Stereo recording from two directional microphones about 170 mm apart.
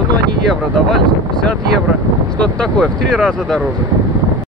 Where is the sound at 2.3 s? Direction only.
5° left (ahead or behind).